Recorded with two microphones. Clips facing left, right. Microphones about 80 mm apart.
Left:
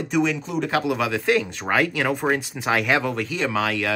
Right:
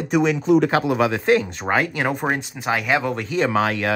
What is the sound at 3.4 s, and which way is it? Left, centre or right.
Speech, right.